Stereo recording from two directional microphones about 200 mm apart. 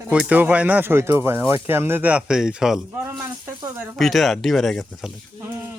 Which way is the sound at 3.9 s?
Centre (ahead or behind).